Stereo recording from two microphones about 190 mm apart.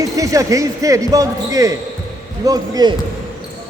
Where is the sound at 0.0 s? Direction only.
15° right (ahead or behind).